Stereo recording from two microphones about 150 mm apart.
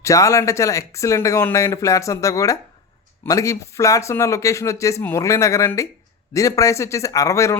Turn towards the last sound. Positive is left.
turn(degrees=20)  # may be behind; listen again after turning